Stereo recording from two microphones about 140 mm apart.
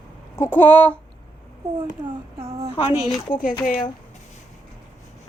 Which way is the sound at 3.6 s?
75° left (ahead or behind).